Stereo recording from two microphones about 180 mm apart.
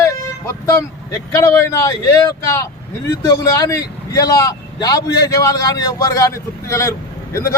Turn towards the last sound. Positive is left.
turn(degrees=15)  # may be behind; listen again after turning